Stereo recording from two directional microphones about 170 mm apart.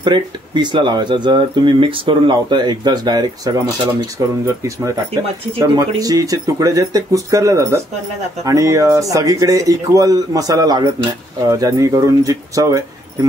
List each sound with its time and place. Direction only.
0.0 s speech: 25° right (ahead or behind)
5.6 s speech: 20° right (ahead or behind)